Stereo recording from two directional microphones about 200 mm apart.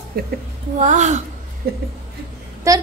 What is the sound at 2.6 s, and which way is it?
Speech, 15° right (ahead or behind).